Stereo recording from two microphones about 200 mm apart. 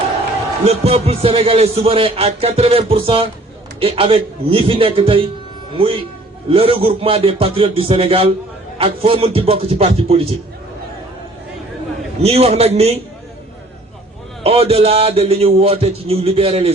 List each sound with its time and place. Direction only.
0.6 s a man's voice: 30° right (ahead or behind)
12.2 s a man's voice: 30° right (ahead or behind)
14.4 s a man's voice: 30° right (ahead or behind)